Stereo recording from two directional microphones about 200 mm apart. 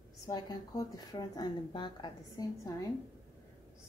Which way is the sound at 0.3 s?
20° left (ahead or behind).